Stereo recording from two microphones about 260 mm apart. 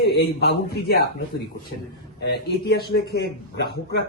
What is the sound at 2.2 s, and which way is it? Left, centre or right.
A man's voice, left.